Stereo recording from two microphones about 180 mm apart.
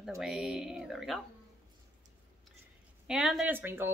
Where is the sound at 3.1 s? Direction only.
Centre (ahead or behind).